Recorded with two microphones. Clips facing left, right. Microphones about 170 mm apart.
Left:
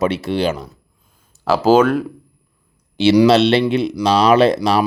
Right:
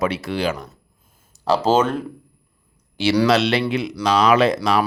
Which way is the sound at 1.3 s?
5° left (ahead or behind).